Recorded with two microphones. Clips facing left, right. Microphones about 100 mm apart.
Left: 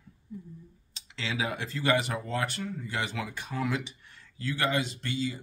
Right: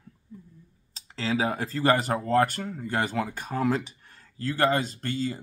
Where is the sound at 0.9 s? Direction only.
40° right (ahead or behind).